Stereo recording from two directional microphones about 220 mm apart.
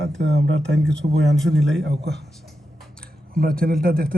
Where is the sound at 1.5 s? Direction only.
Centre (ahead or behind).